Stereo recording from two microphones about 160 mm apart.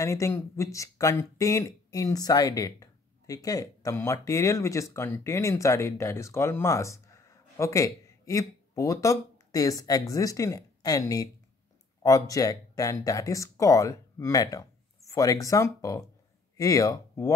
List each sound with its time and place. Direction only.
0.0 s speech: 20° left (ahead or behind)